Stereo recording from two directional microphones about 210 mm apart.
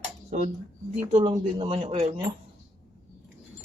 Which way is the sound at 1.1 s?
35° right (ahead or behind).